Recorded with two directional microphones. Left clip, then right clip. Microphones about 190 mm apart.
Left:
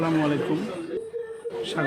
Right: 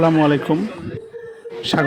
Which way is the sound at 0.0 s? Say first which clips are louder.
Right 9 dB; 40° right (ahead or behind).